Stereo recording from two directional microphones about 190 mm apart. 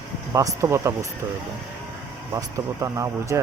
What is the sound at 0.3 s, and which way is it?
Speech, 15° right (ahead or behind).